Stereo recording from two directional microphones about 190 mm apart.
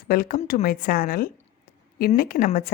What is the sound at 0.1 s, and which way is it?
Speech, 50° left (ahead or behind).